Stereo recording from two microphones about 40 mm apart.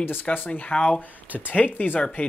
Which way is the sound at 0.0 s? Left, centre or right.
Left.